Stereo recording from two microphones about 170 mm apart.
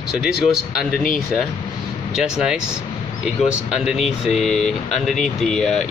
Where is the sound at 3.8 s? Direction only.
Centre (ahead or behind).